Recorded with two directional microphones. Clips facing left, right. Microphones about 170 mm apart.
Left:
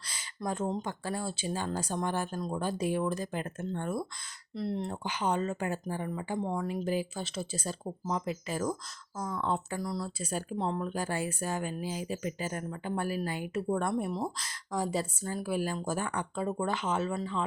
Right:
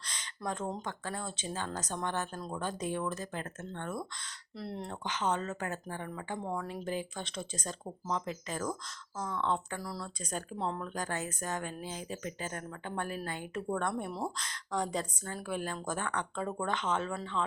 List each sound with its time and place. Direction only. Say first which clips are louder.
0.1 s a sound: left 3 dB; 5° left (ahead or behind)
0.8 s speech: left 4 dB; 10° left (ahead or behind)
4.5 s speech: left 6 dB; centre (ahead or behind)
6.4 s speech: left 3 dB; 20° left (ahead or behind)
6.7 s speech: left 5 dB; 5° left (ahead or behind)
10.2 s speech: left 4 dB; 5° left (ahead or behind)